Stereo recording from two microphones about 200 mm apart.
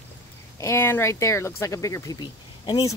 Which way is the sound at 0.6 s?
15° left (ahead or behind).